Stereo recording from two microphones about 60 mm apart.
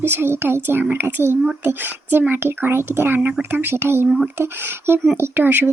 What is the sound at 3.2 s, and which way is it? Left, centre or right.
Speech, right.